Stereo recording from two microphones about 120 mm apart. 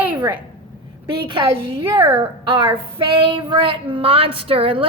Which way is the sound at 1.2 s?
45° right (ahead or behind).